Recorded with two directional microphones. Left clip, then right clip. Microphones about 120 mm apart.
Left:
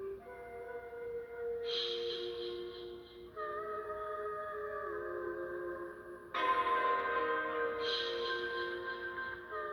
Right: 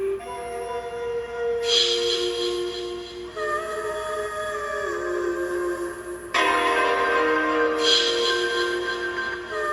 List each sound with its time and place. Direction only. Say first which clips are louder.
1.6 s music: right 18 dB; 15° right (ahead or behind)
6.3 s music: right 12 dB; 20° right (ahead or behind)